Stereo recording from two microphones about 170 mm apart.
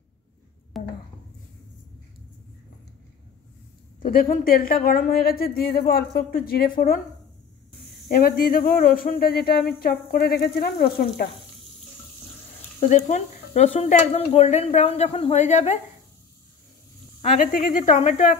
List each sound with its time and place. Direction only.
0.7 s a sound: centre (ahead or behind)
4.0 s speech: 55° left (ahead or behind)
8.1 s speech: 55° left (ahead or behind)
12.8 s speech: 45° left (ahead or behind)
17.2 s speech: 55° left (ahead or behind)